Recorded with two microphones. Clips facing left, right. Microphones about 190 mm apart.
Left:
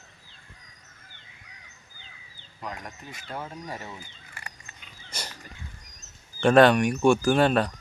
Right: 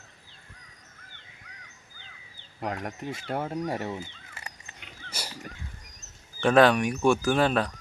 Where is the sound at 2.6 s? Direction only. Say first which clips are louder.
Right 6 dB; 65° right (ahead or behind).